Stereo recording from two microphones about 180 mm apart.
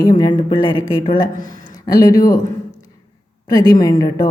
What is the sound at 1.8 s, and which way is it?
Speech, 20° left (ahead or behind).